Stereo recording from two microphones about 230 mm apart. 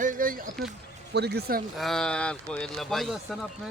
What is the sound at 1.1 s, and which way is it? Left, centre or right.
Speech, right.